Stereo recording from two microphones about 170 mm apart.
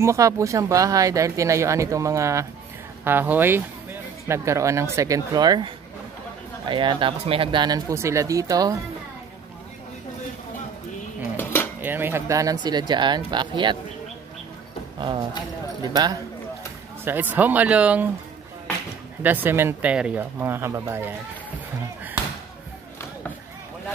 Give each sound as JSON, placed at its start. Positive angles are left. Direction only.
{"t": 0.0, "sound": "speech", "side_deg": -15}
{"t": 6.7, "sound": "speech", "side_deg": -30}
{"t": 11.3, "sound": "dishes", "side_deg": 15}
{"t": 11.8, "sound": "speech", "side_deg": -10}
{"t": 15.0, "sound": "speech", "side_deg": -25}
{"t": 17.0, "sound": "speech", "side_deg": -10}
{"t": 19.2, "sound": "speech", "side_deg": -10}